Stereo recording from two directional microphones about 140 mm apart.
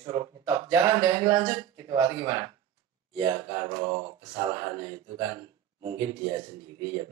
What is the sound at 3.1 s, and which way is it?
Mantra, 35° right (ahead or behind).